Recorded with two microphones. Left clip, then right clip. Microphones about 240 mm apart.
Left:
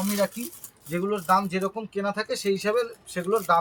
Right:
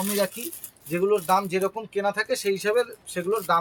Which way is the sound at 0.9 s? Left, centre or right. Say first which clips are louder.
Right 2 dB; right.